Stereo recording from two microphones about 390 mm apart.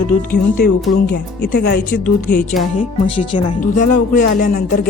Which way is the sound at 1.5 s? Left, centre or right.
Left.